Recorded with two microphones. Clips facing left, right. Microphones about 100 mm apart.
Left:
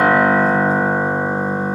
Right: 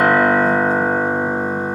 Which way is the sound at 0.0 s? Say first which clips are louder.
Even; 5° left (ahead or behind).